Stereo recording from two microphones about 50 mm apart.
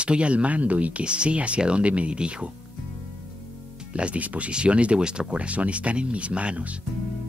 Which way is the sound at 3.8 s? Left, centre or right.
Right.